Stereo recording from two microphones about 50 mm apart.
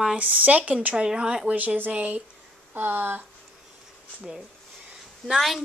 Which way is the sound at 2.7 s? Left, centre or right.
Right.